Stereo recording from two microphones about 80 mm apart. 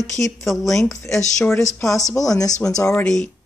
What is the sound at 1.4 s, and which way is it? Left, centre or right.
Speech, left.